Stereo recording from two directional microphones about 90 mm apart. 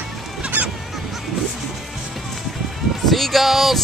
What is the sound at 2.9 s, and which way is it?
Music, centre (ahead or behind).